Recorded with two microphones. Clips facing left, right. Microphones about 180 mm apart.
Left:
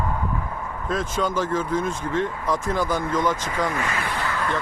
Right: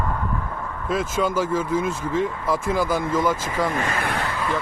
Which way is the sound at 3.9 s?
55° right (ahead or behind).